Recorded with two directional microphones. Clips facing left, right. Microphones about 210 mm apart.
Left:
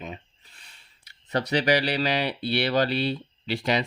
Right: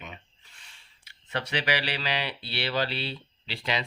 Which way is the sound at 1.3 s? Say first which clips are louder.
Left 7 dB; 40° left (ahead or behind).